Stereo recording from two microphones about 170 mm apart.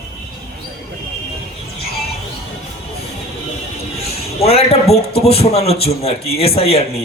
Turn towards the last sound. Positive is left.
turn(degrees=35)  # may be behind; listen again after turning